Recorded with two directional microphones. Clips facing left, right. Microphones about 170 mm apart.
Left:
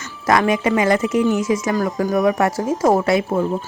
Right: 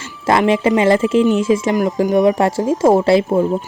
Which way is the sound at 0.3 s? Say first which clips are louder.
Right 3 dB; 25° right (ahead or behind).